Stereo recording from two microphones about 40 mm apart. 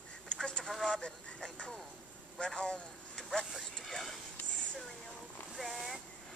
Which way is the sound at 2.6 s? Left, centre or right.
Centre.